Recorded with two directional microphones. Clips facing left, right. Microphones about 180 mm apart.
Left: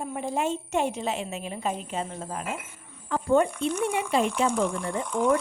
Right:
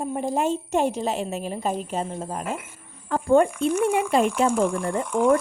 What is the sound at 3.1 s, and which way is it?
A woman's voice, 50° right (ahead or behind).